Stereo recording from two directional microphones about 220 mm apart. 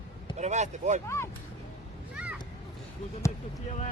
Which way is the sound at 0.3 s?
30° right (ahead or behind).